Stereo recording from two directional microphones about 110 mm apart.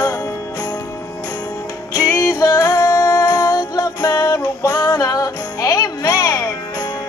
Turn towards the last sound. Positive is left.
turn(degrees=30)  # may be behind; listen again after turning